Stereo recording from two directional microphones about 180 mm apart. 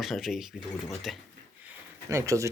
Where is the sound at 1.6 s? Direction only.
15° right (ahead or behind).